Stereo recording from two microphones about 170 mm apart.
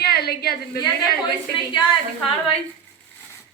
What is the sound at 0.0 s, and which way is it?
Speech, 65° left (ahead or behind).